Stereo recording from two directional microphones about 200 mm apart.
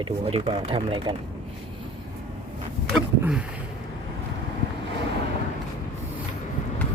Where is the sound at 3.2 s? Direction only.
5° right (ahead or behind).